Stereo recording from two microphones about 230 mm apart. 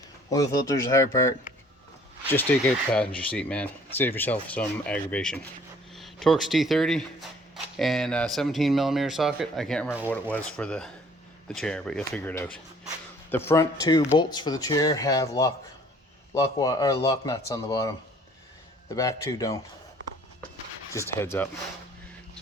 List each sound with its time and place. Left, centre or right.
0.3 s speech: centre
2.3 s speech: centre
20.9 s speech: centre